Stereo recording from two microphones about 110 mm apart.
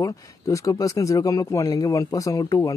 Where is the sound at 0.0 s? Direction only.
30° left (ahead or behind).